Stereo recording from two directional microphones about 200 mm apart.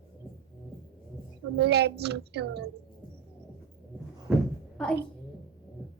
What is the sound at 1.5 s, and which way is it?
A woman's voice, 55° right (ahead or behind).